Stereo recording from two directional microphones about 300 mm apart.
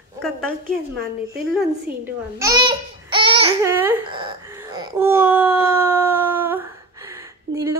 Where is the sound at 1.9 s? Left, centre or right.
Centre.